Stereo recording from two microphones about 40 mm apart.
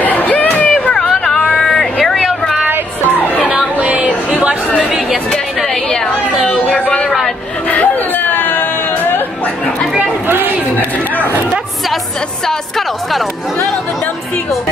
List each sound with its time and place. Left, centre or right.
0.0 s a sound: left
0.9 s vehicle: centre
1.5 s a sound: centre
3.8 s chatter: right
4.8 s chatter: centre
5.7 s chatter: centre
7.6 s a sound: left
10.2 s chatter: right
12.4 s music: centre